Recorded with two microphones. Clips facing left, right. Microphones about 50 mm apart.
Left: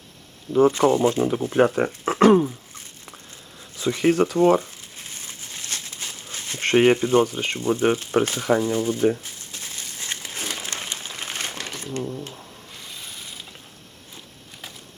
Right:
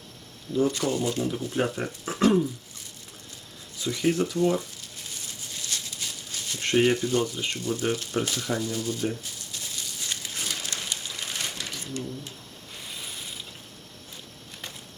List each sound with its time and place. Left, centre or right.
0.7 s speech: left
1.5 s speech: left
3.8 s speech: left
4.8 s a sound: left
6.7 s speech: left
9.2 s crumpling: left
12.9 s a sound: centre